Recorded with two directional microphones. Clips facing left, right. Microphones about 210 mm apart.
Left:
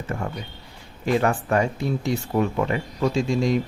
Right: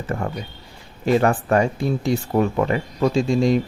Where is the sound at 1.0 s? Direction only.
50° right (ahead or behind); by 3.5 s 35° right (ahead or behind).